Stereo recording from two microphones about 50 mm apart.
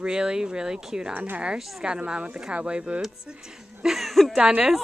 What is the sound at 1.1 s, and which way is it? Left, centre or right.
Speech, right.